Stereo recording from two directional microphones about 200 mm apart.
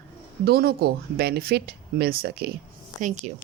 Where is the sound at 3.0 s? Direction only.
40° right (ahead or behind).